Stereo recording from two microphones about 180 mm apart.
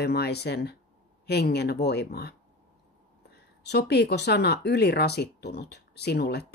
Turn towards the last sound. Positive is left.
turn(degrees=65)  # may be behind; listen again after turning